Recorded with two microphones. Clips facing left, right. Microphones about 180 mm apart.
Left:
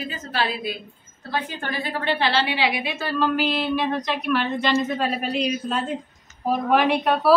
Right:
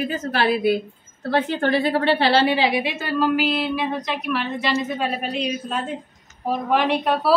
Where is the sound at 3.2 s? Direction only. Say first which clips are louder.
Right 2 dB; 5° right (ahead or behind).